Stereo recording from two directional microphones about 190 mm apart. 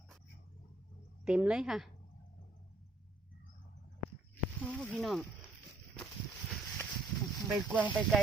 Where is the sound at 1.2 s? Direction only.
5° right (ahead or behind).